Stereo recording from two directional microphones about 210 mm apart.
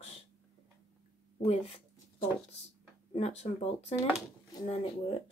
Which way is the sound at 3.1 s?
30° left (ahead or behind).